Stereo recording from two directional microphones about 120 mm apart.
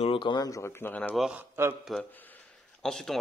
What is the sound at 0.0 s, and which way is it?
Speech, 45° left (ahead or behind).